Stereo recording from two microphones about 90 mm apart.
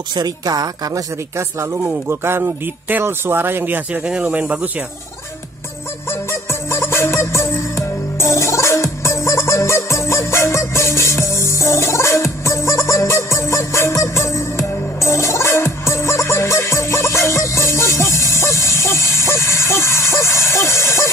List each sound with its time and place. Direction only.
0.1 s a woman's voice: 50° right (ahead or behind); by 4.8 s 15° right (ahead or behind)
6.0 s music: 30° left (ahead or behind)